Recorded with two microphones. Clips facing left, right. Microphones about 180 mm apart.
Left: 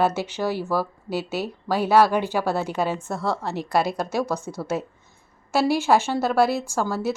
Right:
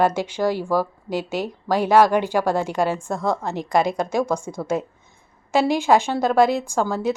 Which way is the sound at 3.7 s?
5° left (ahead or behind).